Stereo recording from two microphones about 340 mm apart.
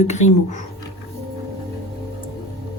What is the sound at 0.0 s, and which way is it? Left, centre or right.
Speech, centre.